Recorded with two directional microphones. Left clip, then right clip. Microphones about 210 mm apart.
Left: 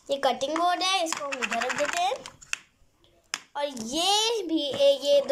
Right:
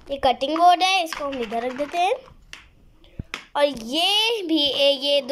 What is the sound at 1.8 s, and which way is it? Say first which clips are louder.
Speech: even; 10° right (ahead or behind).